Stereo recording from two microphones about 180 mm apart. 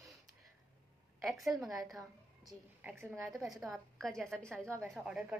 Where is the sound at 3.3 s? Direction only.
Centre (ahead or behind).